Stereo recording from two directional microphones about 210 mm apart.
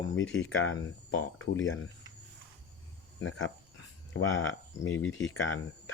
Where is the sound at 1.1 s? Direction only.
70° left (ahead or behind).